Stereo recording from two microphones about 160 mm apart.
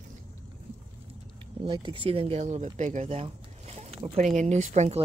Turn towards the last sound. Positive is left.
turn(degrees=-45)  # may be behind; listen again after turning